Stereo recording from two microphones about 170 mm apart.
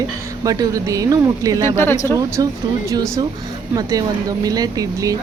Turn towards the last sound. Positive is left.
turn(degrees=-20)  # may be behind; listen again after turning